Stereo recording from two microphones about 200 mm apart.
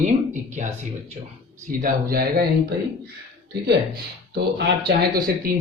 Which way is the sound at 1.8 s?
45° right (ahead or behind).